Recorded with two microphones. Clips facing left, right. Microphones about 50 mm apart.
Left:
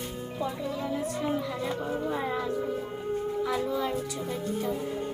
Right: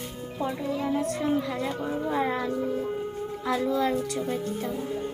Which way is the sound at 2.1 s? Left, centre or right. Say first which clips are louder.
Right 6 dB; right.